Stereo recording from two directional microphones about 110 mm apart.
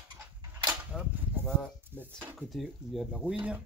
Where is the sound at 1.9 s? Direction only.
20° right (ahead or behind).